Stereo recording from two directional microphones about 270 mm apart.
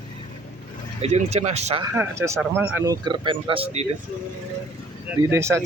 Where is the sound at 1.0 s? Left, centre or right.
Right.